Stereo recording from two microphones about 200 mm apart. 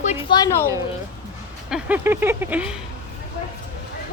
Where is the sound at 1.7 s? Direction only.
10° right (ahead or behind).